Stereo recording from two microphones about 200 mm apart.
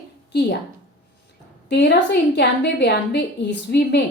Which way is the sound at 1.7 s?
60° left (ahead or behind).